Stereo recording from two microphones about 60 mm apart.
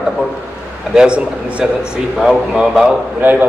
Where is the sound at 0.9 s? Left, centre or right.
Centre.